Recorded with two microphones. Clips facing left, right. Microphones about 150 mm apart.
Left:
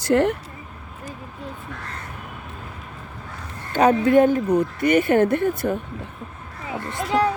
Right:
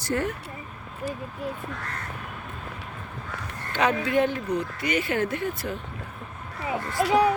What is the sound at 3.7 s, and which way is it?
Speech, 45° left (ahead or behind).